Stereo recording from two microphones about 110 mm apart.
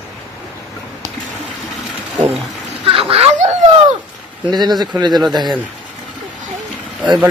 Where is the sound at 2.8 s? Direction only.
55° right (ahead or behind).